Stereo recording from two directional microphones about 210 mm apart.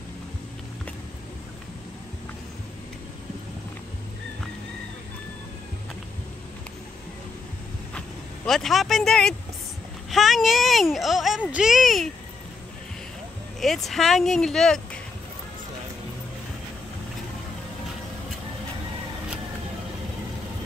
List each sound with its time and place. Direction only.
8.5 s speech: centre (ahead or behind)
13.6 s speech: centre (ahead or behind)